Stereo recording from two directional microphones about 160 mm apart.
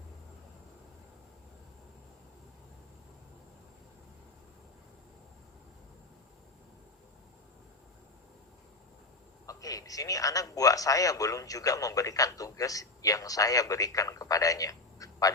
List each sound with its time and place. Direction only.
9.5 s a man's voice: 20° left (ahead or behind)